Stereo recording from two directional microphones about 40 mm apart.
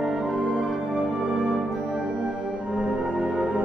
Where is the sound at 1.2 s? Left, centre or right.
Centre.